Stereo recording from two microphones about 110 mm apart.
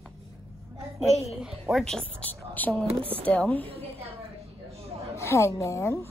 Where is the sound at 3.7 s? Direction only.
65° right (ahead or behind).